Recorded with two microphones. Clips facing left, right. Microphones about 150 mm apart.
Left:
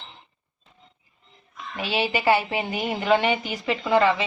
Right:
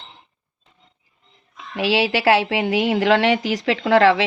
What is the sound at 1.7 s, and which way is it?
A woman's voice, 90° right.